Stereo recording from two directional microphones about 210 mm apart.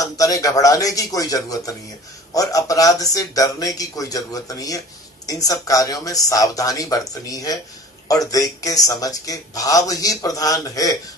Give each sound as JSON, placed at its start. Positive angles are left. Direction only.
{"t": 0.0, "sound": "speech", "side_deg": 15}